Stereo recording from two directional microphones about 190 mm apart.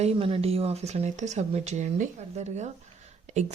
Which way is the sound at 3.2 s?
35° right (ahead or behind).